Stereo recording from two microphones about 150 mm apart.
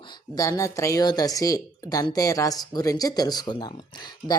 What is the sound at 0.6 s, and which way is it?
Speech, 20° left (ahead or behind).